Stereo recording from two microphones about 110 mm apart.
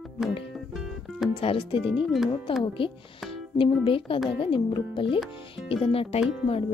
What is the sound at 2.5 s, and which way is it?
Speech, 50° left (ahead or behind).